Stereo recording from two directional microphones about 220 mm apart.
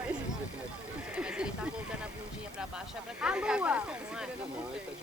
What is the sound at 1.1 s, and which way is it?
Horse, 5° right (ahead or behind).